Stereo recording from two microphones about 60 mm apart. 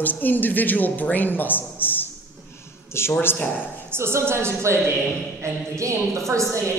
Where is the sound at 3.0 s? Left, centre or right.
Left.